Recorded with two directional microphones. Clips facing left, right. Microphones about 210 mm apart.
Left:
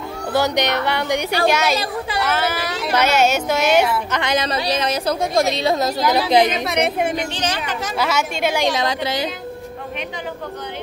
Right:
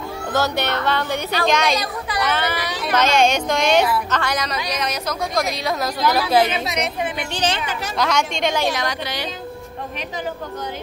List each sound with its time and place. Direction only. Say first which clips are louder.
0.3 s a woman's voice: left 3 dB; 15° left (ahead or behind)
4.2 s a woman's voice: left 4 dB; 25° left (ahead or behind)
6.6 s a woman's voice: left 4 dB; 55° left (ahead or behind)
7.3 s speech: right 1 dB; 30° right (ahead or behind)
8.0 s a woman's voice: even; 5° left (ahead or behind)
8.6 s a woman's voice: left 3 dB; 25° left (ahead or behind)